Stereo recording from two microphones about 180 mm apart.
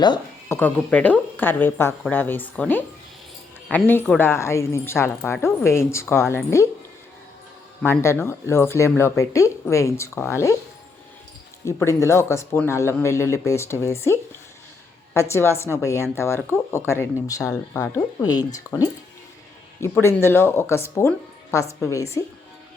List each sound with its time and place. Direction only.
0.0 s a woman's voice: 20° left (ahead or behind)
7.8 s a woman's voice: 15° left (ahead or behind)
11.6 s a woman's voice: 15° left (ahead or behind)